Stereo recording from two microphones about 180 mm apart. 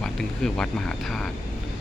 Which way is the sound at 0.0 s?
5° left (ahead or behind).